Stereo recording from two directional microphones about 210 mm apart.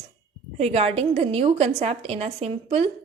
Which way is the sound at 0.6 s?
30° right (ahead or behind).